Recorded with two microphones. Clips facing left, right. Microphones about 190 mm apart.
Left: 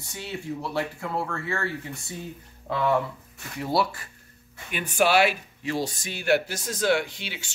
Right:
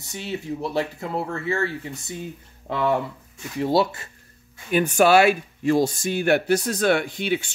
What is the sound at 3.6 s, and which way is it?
Speech, 25° right (ahead or behind).